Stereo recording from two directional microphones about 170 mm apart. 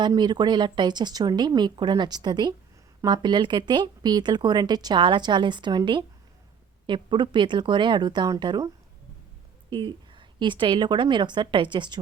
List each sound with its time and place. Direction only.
0.0 s a woman's voice: 25° right (ahead or behind)